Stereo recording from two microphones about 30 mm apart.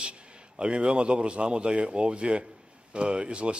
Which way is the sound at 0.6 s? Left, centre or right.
Right.